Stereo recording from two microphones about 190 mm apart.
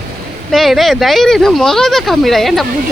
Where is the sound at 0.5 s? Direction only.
Centre (ahead or behind).